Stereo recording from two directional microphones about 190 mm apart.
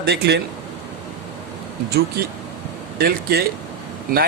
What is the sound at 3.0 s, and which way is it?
Speech, 55° right (ahead or behind).